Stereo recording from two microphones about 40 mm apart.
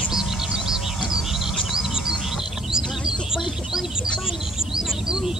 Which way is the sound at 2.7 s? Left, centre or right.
Centre.